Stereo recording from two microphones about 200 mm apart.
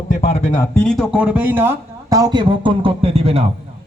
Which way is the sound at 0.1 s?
30° left (ahead or behind).